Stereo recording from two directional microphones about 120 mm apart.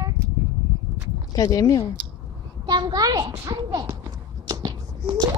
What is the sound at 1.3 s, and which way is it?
Speech, 30° left (ahead or behind).